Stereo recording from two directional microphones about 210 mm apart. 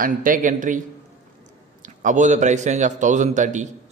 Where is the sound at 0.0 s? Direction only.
40° right (ahead or behind).